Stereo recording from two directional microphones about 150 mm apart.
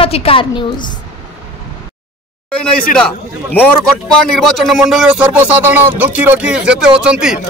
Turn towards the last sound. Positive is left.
turn(degrees=-5)  # may be behind; listen again after turning